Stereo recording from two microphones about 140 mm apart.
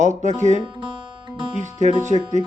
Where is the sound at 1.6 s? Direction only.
55° right (ahead or behind).